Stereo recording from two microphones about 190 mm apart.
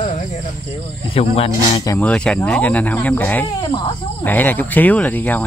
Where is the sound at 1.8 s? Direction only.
15° left (ahead or behind).